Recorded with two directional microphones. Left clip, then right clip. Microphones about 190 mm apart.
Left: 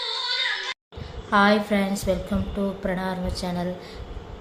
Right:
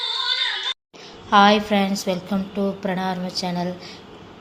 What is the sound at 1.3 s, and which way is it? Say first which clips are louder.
A woman's voice: right 5 dB; 5° right (ahead or behind).